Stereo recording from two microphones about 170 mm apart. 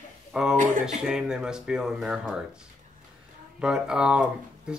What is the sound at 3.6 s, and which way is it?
Speech, 5° right (ahead or behind).